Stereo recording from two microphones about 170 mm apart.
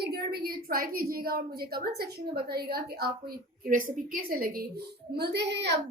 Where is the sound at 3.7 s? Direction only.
55° right (ahead or behind).